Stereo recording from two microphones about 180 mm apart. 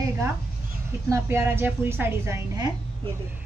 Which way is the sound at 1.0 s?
15° right (ahead or behind).